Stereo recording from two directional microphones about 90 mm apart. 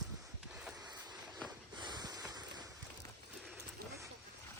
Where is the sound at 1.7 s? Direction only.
55° right (ahead or behind).